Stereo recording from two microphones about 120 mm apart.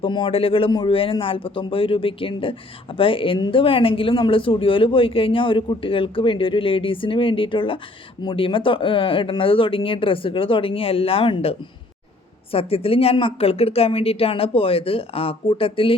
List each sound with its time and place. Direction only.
0.0 s speech: 45° left (ahead or behind)
0.7 s a man's voice: 35° left (ahead or behind)
0.9 s speech: 50° left (ahead or behind)